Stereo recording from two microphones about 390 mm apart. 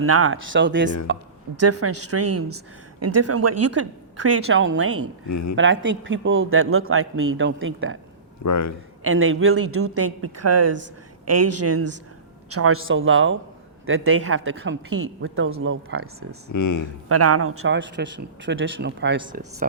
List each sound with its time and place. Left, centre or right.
0.0 s a man's voice: right
5.3 s speech: left
5.5 s a man's voice: right
8.4 s speech: left
9.0 s a man's voice: right
16.5 s speech: left
17.1 s a man's voice: right
19.2 s speech: centre